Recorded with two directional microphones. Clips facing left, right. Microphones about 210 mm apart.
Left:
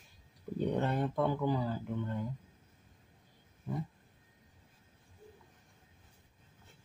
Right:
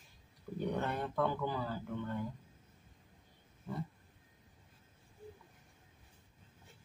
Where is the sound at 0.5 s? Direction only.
20° left (ahead or behind).